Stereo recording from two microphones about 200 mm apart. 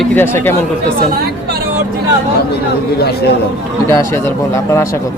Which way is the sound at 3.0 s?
55° left (ahead or behind).